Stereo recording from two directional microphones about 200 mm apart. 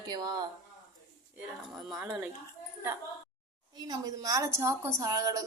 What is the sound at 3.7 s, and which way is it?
A woman's voice, 20° right (ahead or behind).